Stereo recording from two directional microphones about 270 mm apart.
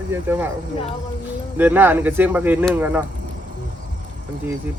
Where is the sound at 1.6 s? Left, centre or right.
Centre.